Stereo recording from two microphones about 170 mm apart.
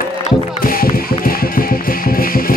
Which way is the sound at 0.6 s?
60° left (ahead or behind).